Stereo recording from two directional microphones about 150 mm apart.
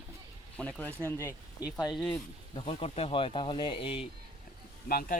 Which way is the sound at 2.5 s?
35° left (ahead or behind).